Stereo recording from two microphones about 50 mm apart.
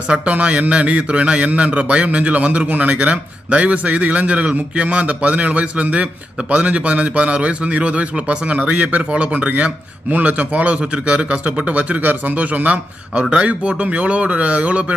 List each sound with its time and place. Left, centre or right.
0.1 s a man's voice: right